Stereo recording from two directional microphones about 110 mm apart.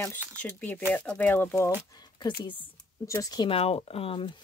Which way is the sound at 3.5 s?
65° left (ahead or behind).